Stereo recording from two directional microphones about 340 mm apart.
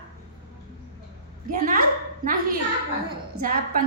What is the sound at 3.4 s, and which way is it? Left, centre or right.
Speech, right.